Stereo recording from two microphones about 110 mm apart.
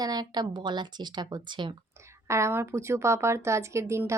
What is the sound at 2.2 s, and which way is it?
Speech, 25° right (ahead or behind).